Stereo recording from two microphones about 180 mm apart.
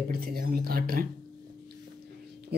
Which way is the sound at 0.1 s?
55° right (ahead or behind).